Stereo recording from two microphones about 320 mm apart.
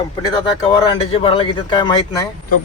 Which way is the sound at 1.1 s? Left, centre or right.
Centre.